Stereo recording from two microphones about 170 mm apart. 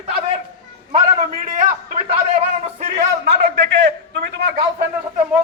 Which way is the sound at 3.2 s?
75° right (ahead or behind).